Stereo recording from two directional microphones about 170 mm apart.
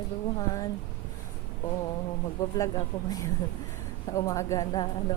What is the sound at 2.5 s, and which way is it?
Speech, 20° left (ahead or behind).